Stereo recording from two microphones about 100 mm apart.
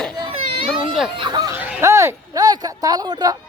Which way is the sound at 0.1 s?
45° right (ahead or behind).